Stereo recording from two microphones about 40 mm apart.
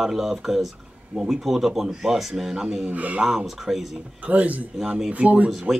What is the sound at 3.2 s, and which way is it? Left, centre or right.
Speech, centre.